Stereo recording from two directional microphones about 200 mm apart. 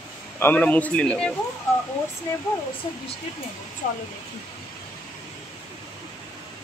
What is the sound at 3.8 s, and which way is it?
Speech, 40° left (ahead or behind).